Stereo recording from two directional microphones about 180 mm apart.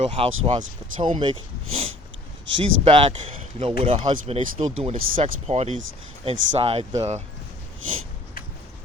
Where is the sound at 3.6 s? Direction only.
30° right (ahead or behind).